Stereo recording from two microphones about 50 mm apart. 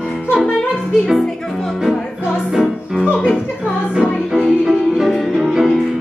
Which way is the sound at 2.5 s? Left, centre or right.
Centre.